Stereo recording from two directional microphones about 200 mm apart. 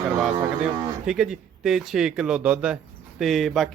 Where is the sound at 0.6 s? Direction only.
5° right (ahead or behind).